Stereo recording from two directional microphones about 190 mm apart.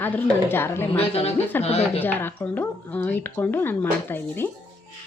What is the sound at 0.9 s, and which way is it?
Speech, 30° left (ahead or behind).